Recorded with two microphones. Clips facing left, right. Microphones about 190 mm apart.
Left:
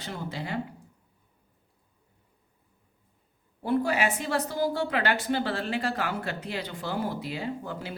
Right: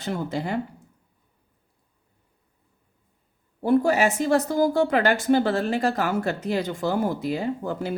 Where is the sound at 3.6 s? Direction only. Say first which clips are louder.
Right 6 dB; 45° right (ahead or behind).